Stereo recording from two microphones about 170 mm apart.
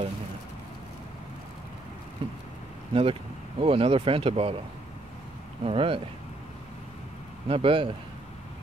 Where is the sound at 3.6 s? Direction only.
35° right (ahead or behind).